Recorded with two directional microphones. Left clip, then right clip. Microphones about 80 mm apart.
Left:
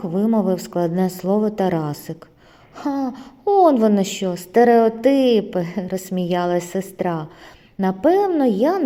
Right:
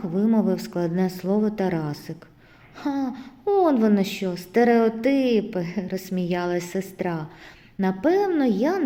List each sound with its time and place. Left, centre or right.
0.4 s a woman's voice: left
2.7 s a woman's voice: left
4.9 s a woman's voice: left